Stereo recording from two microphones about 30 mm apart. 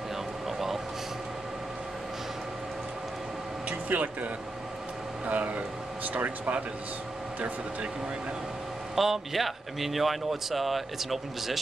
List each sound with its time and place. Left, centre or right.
3.9 s speech: right
8.9 s speech: centre